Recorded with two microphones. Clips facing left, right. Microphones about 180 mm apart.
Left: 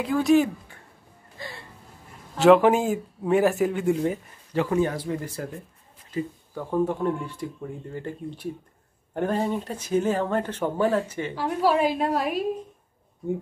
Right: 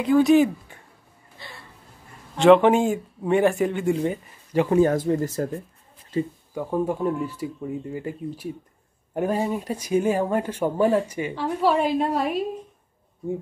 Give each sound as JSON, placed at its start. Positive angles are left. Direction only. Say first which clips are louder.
{"t": 0.0, "sound": "speech", "louder": "right 3 dB", "side_deg": 0}
{"t": 2.3, "sound": "speech", "louder": "right 1 dB", "side_deg": 5}
{"t": 4.5, "sound": "speech", "louder": "right 4 dB", "side_deg": -15}
{"t": 4.8, "sound": "speech", "louder": "right 7 dB", "side_deg": -45}
{"t": 6.5, "sound": "speech", "louder": "even", "side_deg": -10}
{"t": 11.3, "sound": "speech", "louder": "even", "side_deg": 5}